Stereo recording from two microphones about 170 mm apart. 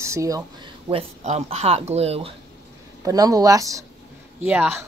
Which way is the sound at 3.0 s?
20° right (ahead or behind).